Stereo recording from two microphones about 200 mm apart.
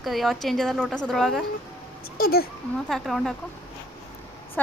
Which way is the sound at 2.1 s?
50° left (ahead or behind).